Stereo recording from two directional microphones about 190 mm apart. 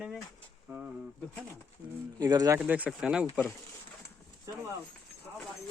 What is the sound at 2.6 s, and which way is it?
Speech, 5° right (ahead or behind).